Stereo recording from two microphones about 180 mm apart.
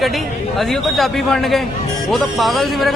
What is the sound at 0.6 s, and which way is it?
A man's voice, centre (ahead or behind).